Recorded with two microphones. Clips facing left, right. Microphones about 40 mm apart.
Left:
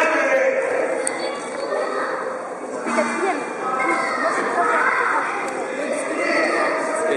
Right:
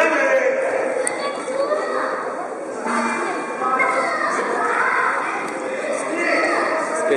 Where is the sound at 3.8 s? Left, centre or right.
Centre.